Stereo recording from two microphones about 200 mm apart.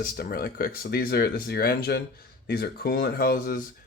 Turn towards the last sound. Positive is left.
turn(degrees=45)  # may be behind; listen again after turning